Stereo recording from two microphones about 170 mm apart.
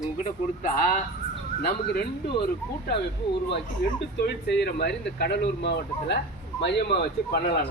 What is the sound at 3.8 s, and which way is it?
Speech, 70° left (ahead or behind).